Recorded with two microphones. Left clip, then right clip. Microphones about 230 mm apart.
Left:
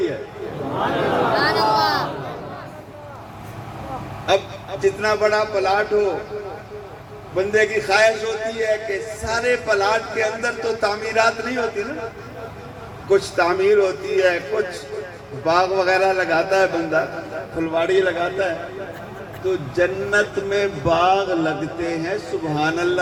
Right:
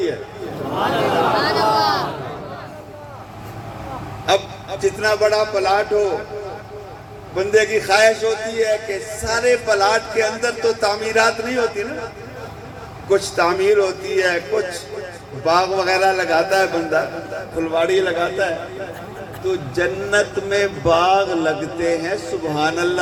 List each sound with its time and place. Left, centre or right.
0.8 s a sound: right
1.4 s a sound: centre
4.8 s speech: right
7.3 s speech: right
13.1 s speech: right
19.7 s speech: right